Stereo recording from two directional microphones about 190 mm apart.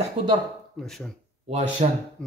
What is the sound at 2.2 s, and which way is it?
Speech, 5° left (ahead or behind).